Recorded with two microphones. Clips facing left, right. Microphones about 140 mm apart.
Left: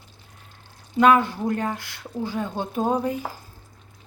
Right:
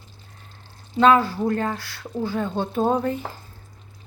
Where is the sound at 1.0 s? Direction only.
15° left (ahead or behind).